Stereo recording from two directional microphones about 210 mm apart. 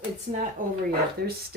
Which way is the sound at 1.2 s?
50° right (ahead or behind).